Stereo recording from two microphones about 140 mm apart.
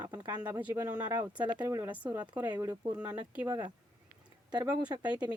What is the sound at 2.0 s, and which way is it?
Speech, 10° right (ahead or behind).